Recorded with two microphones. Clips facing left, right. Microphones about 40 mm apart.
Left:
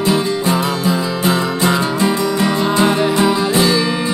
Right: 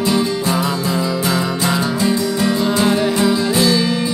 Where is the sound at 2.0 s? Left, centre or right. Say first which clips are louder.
Left 2 dB; left.